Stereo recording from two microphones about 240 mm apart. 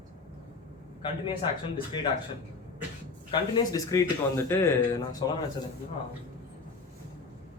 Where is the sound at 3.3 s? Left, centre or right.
Centre.